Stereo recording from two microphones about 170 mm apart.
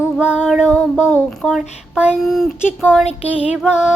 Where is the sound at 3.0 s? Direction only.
35° left (ahead or behind).